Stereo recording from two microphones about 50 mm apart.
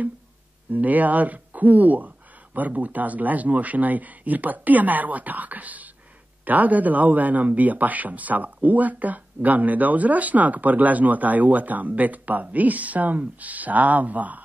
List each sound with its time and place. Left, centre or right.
0.7 s speech: right